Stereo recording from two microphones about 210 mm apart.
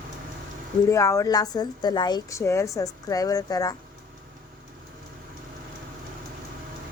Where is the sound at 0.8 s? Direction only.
15° left (ahead or behind).